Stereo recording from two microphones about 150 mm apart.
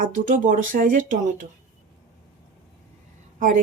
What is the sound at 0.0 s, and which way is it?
Speech, 60° right (ahead or behind).